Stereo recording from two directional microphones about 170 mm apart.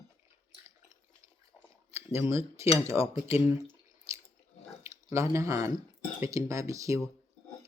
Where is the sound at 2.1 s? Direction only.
15° right (ahead or behind).